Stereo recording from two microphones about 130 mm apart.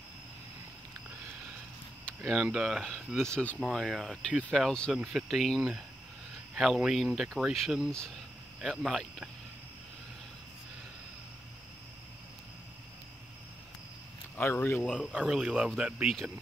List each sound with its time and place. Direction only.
2.2 s speech: 5° right (ahead or behind); by 3.6 s 10° left (ahead or behind)
3.6 s speech: centre (ahead or behind)
4.6 s speech: 5° left (ahead or behind)
14.3 s speech: 15° left (ahead or behind)
15.1 s speech: 5° right (ahead or behind)